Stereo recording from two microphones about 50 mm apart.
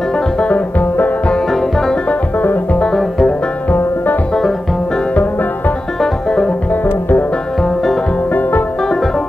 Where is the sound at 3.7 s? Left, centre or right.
Left.